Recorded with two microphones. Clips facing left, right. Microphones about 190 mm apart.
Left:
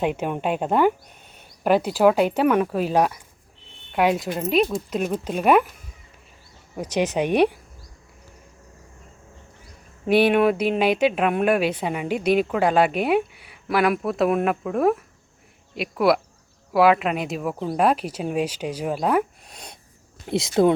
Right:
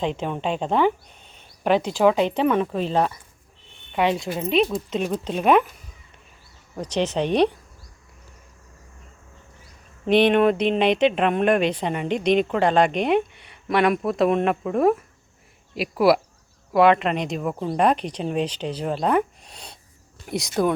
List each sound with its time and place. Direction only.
0.0 s speech: 10° left (ahead or behind)
6.7 s speech: 10° left (ahead or behind)
10.1 s speech: 5° left (ahead or behind)
20.4 s speech: 25° left (ahead or behind)